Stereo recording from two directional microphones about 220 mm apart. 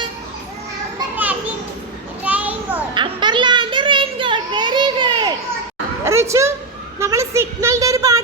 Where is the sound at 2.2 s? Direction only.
5° right (ahead or behind).